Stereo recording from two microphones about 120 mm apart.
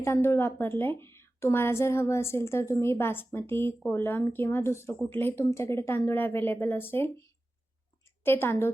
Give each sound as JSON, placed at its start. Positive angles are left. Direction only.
{"t": 0.0, "sound": "a woman's voice", "side_deg": 20}